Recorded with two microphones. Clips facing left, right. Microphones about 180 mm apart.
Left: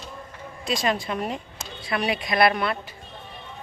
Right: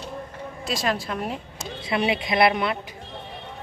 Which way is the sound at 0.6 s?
Centre (ahead or behind).